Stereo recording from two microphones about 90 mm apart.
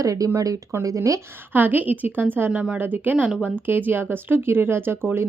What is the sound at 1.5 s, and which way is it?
A woman's voice, 20° right (ahead or behind).